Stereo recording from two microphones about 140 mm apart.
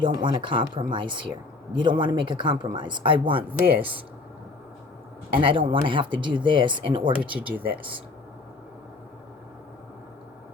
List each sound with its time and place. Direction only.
0.0 s speech: 35° right (ahead or behind)
5.3 s speech: 40° right (ahead or behind)
7.2 s speech: 10° right (ahead or behind)